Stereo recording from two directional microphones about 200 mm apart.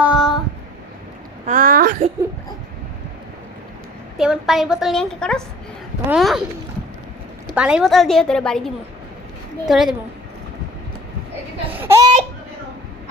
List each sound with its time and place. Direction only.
0.0 s child singing: 5° right (ahead or behind)
1.5 s a sound: 45° right (ahead or behind)
4.2 s a woman's voice: centre (ahead or behind)
7.5 s a woman's voice: 5° right (ahead or behind)
11.8 s speech: 15° right (ahead or behind)